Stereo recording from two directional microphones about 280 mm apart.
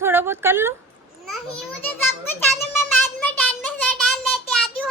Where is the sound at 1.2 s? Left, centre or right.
Right.